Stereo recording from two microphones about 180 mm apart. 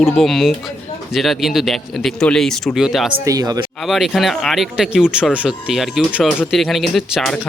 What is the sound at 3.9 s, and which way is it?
Speech, centre (ahead or behind).